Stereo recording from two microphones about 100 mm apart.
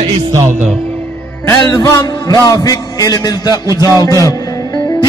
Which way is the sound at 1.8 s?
35° left (ahead or behind).